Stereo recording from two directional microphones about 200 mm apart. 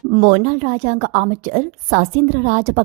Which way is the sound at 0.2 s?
40° right (ahead or behind).